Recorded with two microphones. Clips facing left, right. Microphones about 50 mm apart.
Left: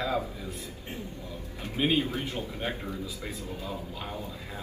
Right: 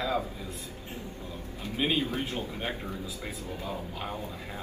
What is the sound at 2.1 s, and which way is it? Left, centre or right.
A man's voice, right.